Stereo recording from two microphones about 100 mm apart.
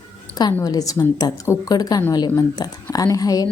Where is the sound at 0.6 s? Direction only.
40° left (ahead or behind).